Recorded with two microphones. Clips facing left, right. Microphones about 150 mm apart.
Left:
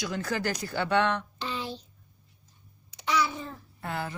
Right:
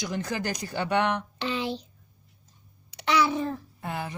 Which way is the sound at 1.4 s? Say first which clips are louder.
Right 5 dB; 75° right (ahead or behind).